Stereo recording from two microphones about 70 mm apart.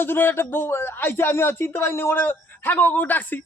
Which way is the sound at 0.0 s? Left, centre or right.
Left.